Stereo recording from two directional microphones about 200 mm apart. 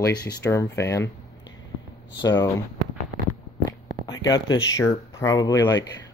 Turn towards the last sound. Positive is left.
turn(degrees=20)  # may be behind; listen again after turning